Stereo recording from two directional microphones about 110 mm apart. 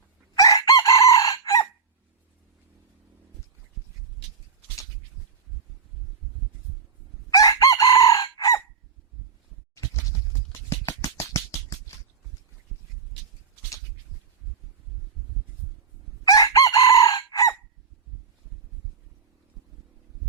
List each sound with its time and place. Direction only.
0.3 s chicken: 35° left (ahead or behind)
7.3 s chicken: 35° left (ahead or behind)
9.7 s a sound: 30° left (ahead or behind)
16.3 s chicken: 35° left (ahead or behind)